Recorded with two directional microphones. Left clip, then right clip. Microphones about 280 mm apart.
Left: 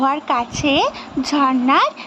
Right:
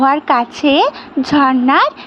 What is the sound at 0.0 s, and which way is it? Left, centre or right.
Speech, centre.